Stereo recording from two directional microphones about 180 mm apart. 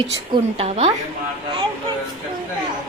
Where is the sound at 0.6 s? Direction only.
35° right (ahead or behind).